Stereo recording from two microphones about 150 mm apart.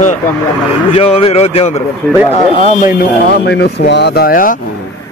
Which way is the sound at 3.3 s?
90° left.